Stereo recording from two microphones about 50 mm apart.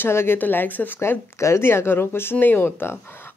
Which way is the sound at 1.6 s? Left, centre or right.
Left.